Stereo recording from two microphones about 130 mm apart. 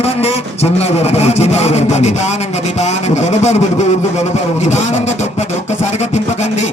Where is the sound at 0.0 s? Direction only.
50° left (ahead or behind).